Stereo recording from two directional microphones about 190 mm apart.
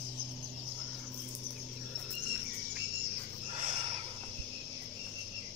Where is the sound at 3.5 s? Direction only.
30° right (ahead or behind).